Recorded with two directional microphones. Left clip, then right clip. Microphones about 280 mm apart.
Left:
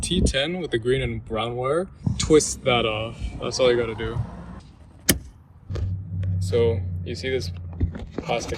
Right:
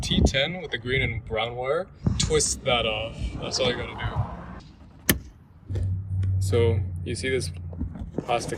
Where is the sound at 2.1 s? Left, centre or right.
Centre.